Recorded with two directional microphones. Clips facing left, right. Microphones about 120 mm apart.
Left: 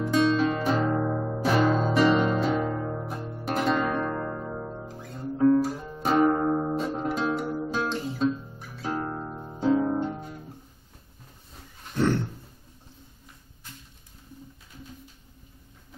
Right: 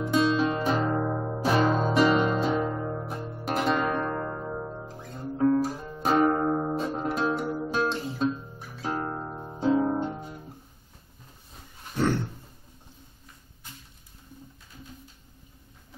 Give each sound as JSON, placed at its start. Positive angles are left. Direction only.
{"t": 0.1, "sound": "music", "side_deg": -10}
{"t": 2.0, "sound": "music", "side_deg": -5}
{"t": 3.8, "sound": "zither", "side_deg": -5}
{"t": 5.2, "sound": "guitar", "side_deg": -10}
{"t": 6.0, "sound": "music", "side_deg": 0}